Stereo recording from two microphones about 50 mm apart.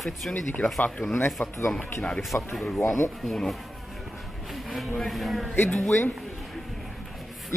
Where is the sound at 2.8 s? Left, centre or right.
Left.